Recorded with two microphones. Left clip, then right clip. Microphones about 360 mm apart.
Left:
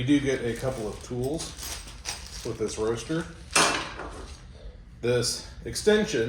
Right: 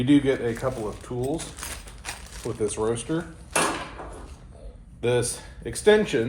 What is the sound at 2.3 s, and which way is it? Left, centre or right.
Speech, right.